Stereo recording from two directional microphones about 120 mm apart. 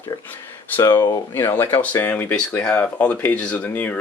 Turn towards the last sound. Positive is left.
turn(degrees=15)  # may be behind; listen again after turning